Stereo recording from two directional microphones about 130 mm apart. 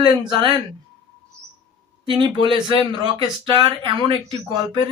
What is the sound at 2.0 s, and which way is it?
Speech, 40° right (ahead or behind).